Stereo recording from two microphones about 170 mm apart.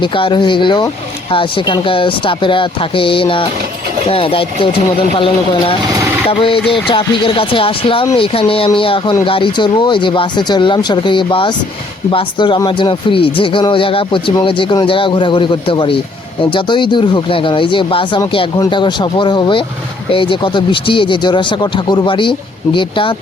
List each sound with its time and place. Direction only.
0.0 s speech: 30° left (ahead or behind)